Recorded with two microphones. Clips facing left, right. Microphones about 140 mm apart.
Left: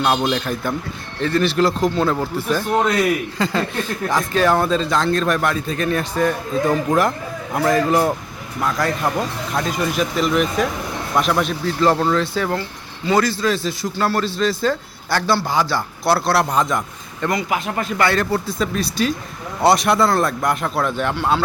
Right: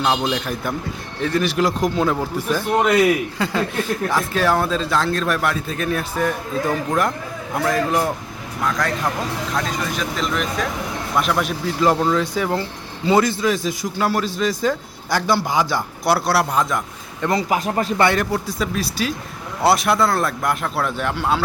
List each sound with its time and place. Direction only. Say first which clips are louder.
0.1 s a man's voice: left 2 dB; 5° right (ahead or behind)
17.2 s speech: right 1 dB; 30° right (ahead or behind)
18.0 s a man's voice: left 1 dB; 15° right (ahead or behind)